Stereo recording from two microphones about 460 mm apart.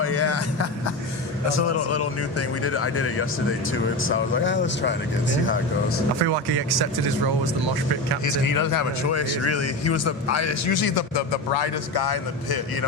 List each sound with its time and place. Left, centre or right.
0.0 s speech: left
6.2 s speech: right
8.2 s speech: left